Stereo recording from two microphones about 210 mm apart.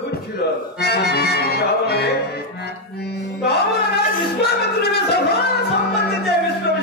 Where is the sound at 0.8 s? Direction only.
50° left (ahead or behind).